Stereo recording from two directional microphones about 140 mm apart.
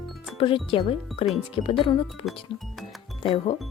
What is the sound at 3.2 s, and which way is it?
Speech, 40° left (ahead or behind).